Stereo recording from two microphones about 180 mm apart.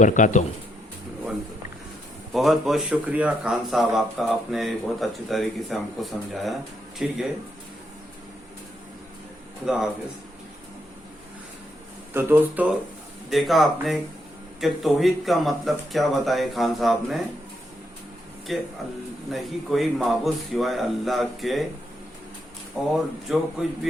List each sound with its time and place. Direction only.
0.0 s speech: 45° left (ahead or behind)
2.3 s speech: centre (ahead or behind)
9.6 s speech: 5° right (ahead or behind)
12.1 s speech: 10° right (ahead or behind)
13.3 s speech: centre (ahead or behind)
18.5 s speech: centre (ahead or behind)
23.0 s speech: centre (ahead or behind)